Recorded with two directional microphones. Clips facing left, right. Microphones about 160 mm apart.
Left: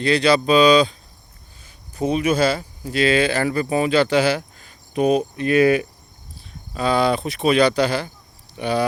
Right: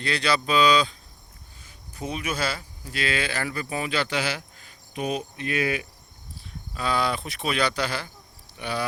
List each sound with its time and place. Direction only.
0.0 s speech: 20° left (ahead or behind)
2.0 s speech: 30° left (ahead or behind); by 5.9 s 50° left (ahead or behind)
6.7 s speech: 25° left (ahead or behind)